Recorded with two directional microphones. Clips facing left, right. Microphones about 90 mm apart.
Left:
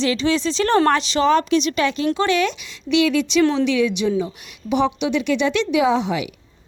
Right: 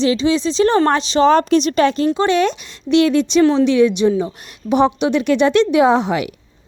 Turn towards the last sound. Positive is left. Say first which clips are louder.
# right 4 dB
turn(degrees=-50)  # may be behind; listen again after turning